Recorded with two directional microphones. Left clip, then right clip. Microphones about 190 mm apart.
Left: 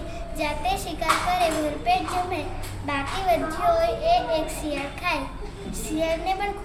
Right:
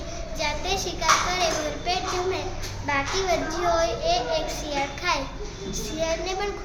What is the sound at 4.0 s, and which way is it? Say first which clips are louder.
A child's voice: left 2 dB; 20° right (ahead or behind).